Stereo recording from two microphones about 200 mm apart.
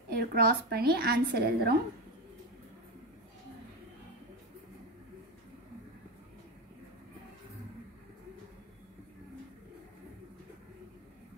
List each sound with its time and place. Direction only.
0.1 s a woman's voice: 50° right (ahead or behind)